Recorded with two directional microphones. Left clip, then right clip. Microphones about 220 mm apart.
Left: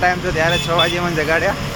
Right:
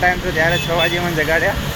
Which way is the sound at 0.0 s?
15° left (ahead or behind).